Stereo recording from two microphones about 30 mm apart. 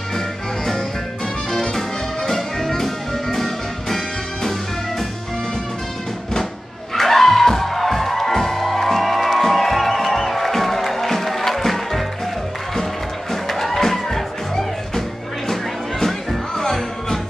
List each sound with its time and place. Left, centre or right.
1.5 s music: left
1.8 s music: centre
7.0 s music: centre
13.3 s music: centre